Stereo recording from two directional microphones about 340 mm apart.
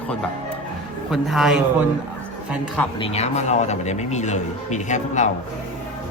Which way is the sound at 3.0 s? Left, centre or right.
Centre.